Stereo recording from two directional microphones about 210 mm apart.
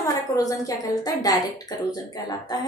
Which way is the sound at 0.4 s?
15° left (ahead or behind).